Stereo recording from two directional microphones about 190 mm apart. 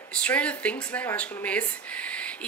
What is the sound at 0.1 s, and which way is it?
Speech, 5° left (ahead or behind).